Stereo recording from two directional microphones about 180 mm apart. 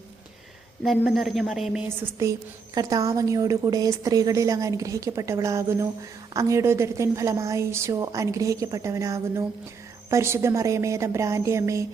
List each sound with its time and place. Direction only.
0.8 s a woman's voice: centre (ahead or behind)
2.0 s a woman's voice: 15° right (ahead or behind)